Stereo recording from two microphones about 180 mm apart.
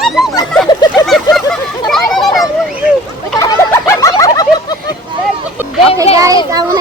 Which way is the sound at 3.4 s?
15° left (ahead or behind).